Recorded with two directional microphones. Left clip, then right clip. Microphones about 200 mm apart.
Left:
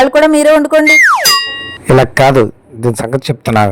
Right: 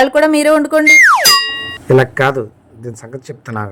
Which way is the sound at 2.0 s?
50° left (ahead or behind).